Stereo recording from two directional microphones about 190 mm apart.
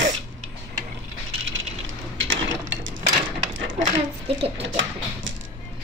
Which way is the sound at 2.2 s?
90° right.